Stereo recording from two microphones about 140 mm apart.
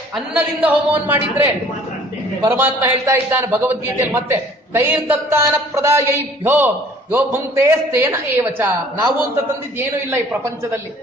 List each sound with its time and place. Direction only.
0.3 s a man's voice: 10° right (ahead or behind)
2.5 s a man's voice: 15° right (ahead or behind)